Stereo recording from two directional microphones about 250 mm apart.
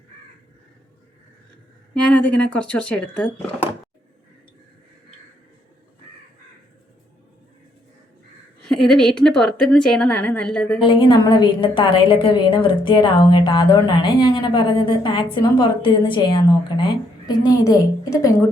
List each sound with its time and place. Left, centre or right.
1.9 s a woman's voice: centre
8.6 s a woman's voice: centre
10.8 s a woman's voice: centre